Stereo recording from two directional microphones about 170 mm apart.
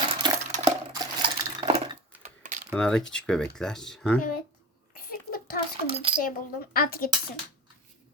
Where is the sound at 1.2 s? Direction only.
30° right (ahead or behind).